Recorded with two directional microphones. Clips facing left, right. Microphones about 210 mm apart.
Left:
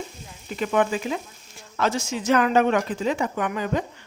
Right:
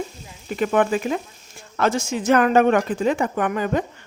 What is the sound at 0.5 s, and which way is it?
Speech, 50° right (ahead or behind).